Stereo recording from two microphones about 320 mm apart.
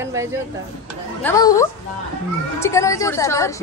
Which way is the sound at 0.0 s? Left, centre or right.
Centre.